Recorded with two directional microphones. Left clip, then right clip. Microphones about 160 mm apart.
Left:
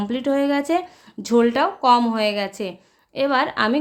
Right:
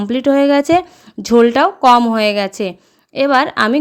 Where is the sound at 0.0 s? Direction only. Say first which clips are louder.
Right 8 dB; 45° right (ahead or behind).